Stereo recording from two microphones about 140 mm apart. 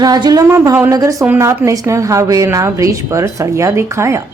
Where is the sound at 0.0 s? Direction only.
30° right (ahead or behind).